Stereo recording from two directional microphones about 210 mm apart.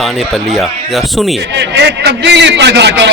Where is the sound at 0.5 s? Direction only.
Centre (ahead or behind).